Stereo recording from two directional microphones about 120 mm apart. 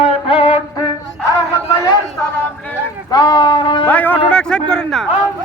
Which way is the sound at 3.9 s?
15° left (ahead or behind).